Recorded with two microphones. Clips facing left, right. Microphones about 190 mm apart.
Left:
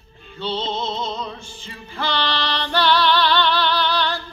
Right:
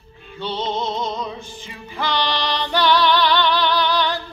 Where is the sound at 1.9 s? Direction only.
15° right (ahead or behind).